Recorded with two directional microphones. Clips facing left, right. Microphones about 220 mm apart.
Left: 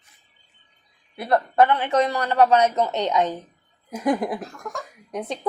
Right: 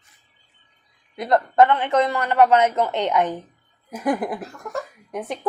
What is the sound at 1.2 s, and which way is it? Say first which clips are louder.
Speech: right 2 dB; 20° right (ahead or behind).